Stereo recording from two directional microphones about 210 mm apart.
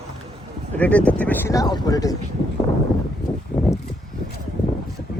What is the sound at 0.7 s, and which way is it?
Speech, 5° left (ahead or behind).